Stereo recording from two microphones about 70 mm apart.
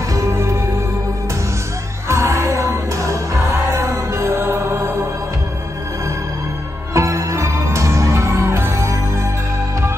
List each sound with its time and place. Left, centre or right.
0.1 s music: right
2.0 s music: right
6.9 s music: right